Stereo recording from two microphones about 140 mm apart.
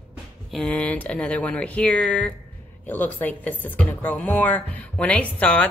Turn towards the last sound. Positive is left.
turn(degrees=10)  # may be behind; listen again after turning